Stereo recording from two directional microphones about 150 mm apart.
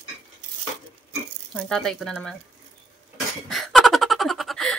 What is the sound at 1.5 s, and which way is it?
Speech, centre (ahead or behind).